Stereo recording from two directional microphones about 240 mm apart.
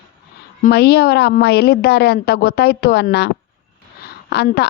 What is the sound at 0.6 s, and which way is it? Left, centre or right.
A woman's voice, left.